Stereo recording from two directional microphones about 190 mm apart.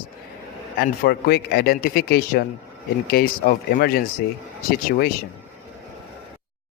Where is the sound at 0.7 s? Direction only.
55° left (ahead or behind).